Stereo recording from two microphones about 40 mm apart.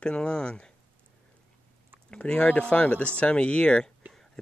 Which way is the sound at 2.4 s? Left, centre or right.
Left.